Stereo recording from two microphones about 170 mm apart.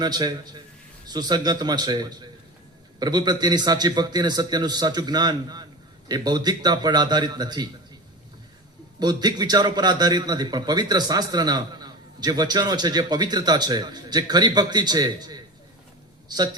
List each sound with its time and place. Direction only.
0.0 s a man's voice: 25° right (ahead or behind)
9.0 s a man's voice: 25° right (ahead or behind)